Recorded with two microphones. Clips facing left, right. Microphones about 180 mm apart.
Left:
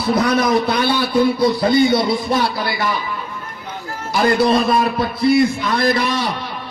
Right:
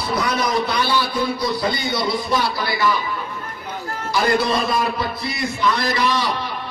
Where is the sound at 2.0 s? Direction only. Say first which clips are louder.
Left 3 dB; 55° left (ahead or behind).